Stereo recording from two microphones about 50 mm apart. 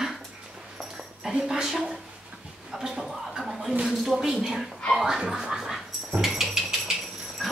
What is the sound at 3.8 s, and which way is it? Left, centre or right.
Speech, centre.